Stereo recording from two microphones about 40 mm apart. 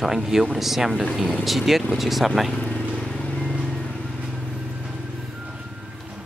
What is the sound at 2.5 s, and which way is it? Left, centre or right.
Vehicle, left.